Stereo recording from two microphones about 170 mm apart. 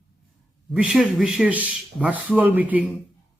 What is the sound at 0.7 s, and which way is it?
Speech, 5° right (ahead or behind).